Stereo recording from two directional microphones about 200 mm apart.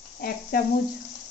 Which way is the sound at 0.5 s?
50° left (ahead or behind).